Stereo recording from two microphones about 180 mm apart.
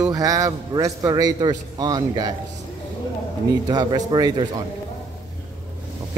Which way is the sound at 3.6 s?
25° right (ahead or behind).